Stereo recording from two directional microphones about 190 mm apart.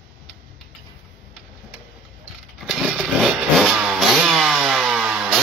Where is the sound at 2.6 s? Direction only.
5° right (ahead or behind).